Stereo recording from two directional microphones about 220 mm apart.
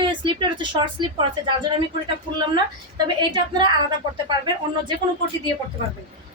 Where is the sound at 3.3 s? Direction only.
20° right (ahead or behind).